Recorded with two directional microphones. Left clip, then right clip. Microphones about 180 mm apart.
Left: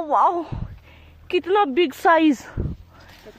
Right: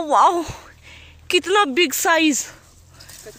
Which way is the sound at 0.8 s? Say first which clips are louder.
Right 7 dB; centre (ahead or behind).